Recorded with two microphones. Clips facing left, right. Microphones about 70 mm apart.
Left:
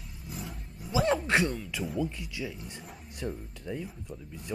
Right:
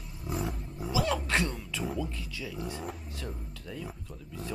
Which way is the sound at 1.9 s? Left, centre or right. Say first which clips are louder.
Left 3 dB; centre.